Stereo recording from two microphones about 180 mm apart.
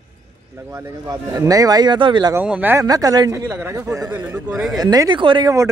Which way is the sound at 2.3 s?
10° right (ahead or behind).